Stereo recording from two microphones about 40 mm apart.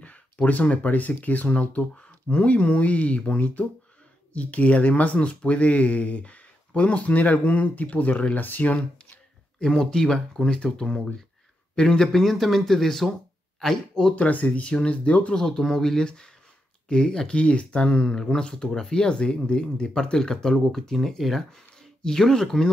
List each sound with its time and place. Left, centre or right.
0.5 s speech: left
8.7 s speech: left
9.9 s speech: centre
14.1 s speech: left
15.3 s speech: centre
16.0 s speech: centre
17.4 s speech: left
18.1 s speech: centre